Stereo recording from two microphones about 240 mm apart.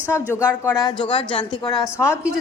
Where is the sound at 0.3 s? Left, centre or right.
Centre.